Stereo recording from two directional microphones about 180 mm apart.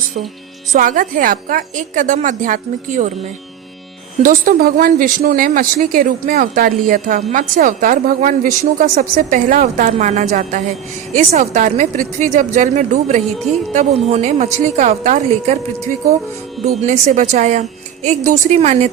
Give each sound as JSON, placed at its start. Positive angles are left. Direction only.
{"t": 0.7, "sound": "speech", "side_deg": -45}
{"t": 4.2, "sound": "a woman's voice", "side_deg": -50}
{"t": 16.8, "sound": "a woman's voice", "side_deg": -45}